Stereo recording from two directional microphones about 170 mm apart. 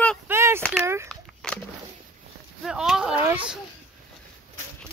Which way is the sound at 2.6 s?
5° right (ahead or behind).